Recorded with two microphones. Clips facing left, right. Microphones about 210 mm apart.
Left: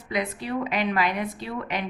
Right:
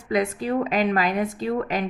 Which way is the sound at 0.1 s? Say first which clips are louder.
Right 5 dB; 45° right (ahead or behind).